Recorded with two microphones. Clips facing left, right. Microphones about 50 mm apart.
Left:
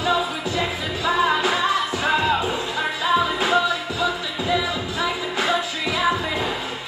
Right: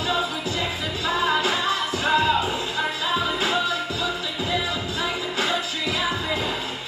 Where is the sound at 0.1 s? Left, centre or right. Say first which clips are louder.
Left 1 dB; left.